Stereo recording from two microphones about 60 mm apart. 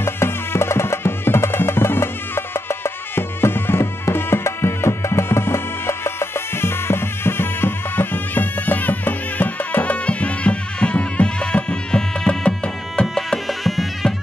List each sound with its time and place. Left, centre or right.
0.0 s music: left; by 13.0 s centre
13.0 s music: centre